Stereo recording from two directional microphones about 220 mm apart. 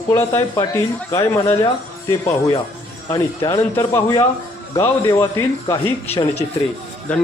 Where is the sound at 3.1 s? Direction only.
15° left (ahead or behind).